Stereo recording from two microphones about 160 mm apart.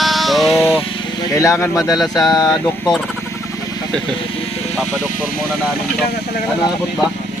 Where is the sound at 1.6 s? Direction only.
15° left (ahead or behind).